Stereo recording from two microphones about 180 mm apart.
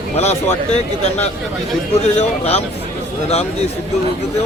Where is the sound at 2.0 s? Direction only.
35° left (ahead or behind).